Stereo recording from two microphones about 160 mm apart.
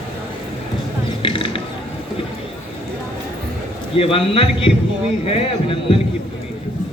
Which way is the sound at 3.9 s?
35° left (ahead or behind).